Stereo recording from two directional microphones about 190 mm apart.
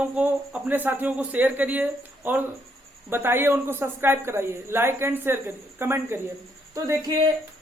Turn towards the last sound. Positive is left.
turn(degrees=-20)  # may be behind; listen again after turning